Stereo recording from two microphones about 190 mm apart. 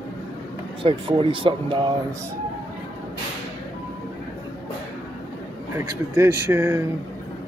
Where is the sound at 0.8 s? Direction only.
25° right (ahead or behind).